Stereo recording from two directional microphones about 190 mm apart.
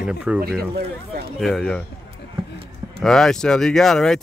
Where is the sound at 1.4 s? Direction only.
5° left (ahead or behind).